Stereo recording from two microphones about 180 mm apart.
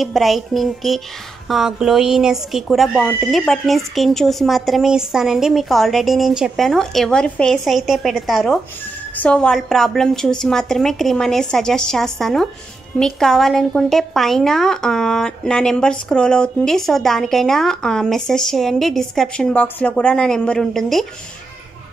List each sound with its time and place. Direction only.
0.0 s a woman's voice: centre (ahead or behind)